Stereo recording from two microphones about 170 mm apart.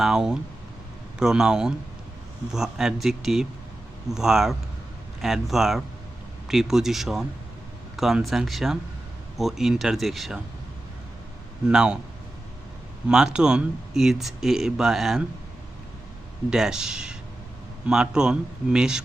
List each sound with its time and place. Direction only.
0.0 s speech: 5° right (ahead or behind)
11.7 s speech: 5° right (ahead or behind)
13.1 s speech: 5° right (ahead or behind)
16.5 s speech: 5° right (ahead or behind)